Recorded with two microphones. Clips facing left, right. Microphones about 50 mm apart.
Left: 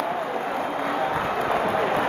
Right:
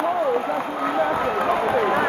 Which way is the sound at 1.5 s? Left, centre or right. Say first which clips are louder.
Right 3 dB; centre.